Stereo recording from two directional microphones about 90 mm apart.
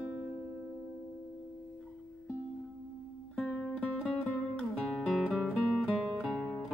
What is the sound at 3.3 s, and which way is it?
Music, 10° left (ahead or behind).